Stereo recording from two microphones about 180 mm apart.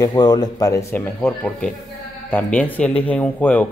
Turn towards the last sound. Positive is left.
turn(degrees=10)  # may be behind; listen again after turning